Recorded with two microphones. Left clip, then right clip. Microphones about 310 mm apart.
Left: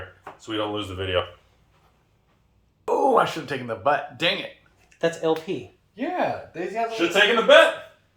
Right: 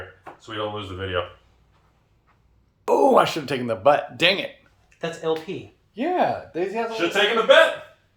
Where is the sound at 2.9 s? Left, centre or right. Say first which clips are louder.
Right 3 dB; right.